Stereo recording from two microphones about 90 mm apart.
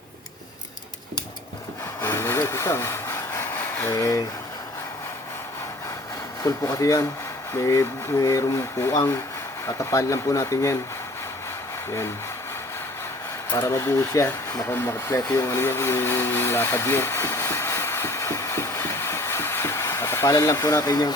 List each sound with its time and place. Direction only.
2.0 s speech: 35° left (ahead or behind)
6.4 s speech: 35° left (ahead or behind)
13.6 s speech: 30° left (ahead or behind)